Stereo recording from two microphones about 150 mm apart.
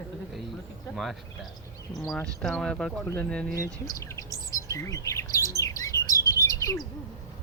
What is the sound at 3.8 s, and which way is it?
Chirp, 20° left (ahead or behind).